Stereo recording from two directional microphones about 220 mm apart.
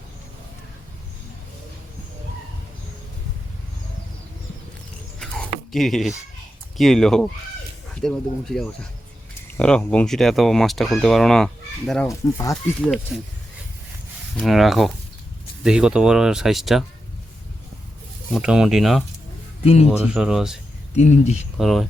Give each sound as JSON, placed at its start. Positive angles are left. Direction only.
{"t": 5.2, "sound": "dog", "side_deg": 5}
{"t": 6.7, "sound": "speech", "side_deg": 0}
{"t": 12.0, "sound": "speech", "side_deg": 15}
{"t": 13.1, "sound": "speech", "side_deg": 0}
{"t": 14.3, "sound": "speech", "side_deg": 0}
{"t": 18.3, "sound": "speech", "side_deg": -5}
{"t": 19.6, "sound": "speech", "side_deg": 30}
{"t": 19.9, "sound": "speech", "side_deg": -5}
{"t": 20.9, "sound": "speech", "side_deg": 30}
{"t": 21.6, "sound": "speech", "side_deg": 0}